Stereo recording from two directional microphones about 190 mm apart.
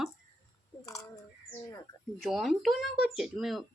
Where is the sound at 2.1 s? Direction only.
Centre (ahead or behind).